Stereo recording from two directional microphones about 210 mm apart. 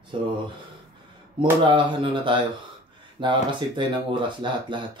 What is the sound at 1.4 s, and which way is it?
Speech, 25° right (ahead or behind).